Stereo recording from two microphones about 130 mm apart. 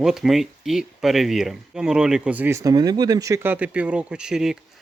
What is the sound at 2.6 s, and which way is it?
Speech, 30° right (ahead or behind).